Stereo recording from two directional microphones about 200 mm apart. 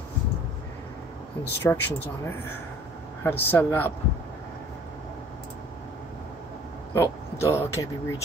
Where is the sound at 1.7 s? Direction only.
10° left (ahead or behind).